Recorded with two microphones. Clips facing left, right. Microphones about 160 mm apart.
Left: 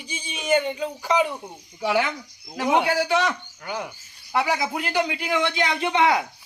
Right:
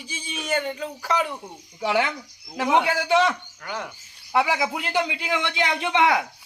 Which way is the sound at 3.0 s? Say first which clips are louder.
Right 3 dB; 20° right (ahead or behind).